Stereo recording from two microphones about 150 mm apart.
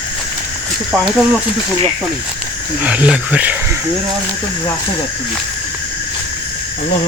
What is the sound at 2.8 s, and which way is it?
Speech, 10° right (ahead or behind).